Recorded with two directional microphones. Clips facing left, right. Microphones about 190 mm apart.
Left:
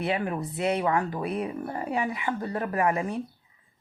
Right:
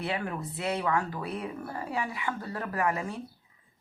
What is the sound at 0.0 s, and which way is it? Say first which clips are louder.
Speech: left 5 dB; 20° left (ahead or behind).